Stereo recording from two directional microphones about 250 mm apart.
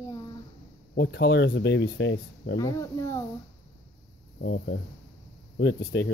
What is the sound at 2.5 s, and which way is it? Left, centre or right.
Speech, centre.